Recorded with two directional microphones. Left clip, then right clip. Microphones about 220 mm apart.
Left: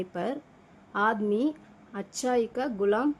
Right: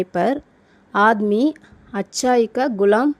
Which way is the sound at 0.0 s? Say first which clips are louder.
Right 13 dB; 30° right (ahead or behind).